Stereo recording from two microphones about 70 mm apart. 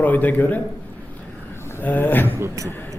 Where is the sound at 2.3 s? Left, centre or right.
Right.